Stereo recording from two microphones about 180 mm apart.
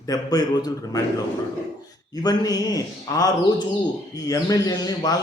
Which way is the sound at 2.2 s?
20° left (ahead or behind).